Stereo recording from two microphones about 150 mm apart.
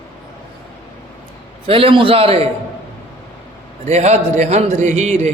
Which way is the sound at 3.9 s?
45° right (ahead or behind).